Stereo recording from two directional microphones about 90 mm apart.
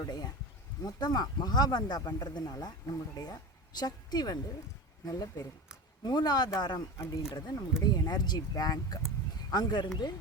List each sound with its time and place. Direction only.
0.0 s speech: 45° left (ahead or behind)
6.0 s speech: 50° left (ahead or behind)
7.0 s speech: 40° left (ahead or behind)
7.3 s speech: 50° left (ahead or behind)